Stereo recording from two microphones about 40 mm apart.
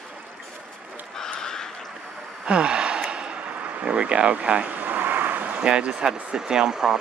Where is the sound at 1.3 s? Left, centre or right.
Centre.